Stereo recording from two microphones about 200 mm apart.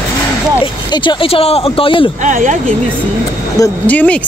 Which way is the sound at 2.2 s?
40° right (ahead or behind).